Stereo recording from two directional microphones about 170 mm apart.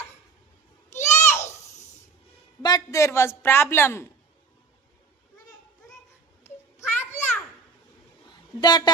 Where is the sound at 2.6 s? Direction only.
25° left (ahead or behind).